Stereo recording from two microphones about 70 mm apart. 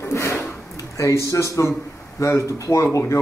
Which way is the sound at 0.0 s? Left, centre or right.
Left.